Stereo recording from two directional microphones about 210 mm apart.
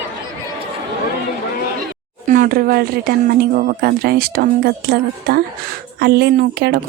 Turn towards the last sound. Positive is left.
turn(degrees=-50)  # may be behind; listen again after turning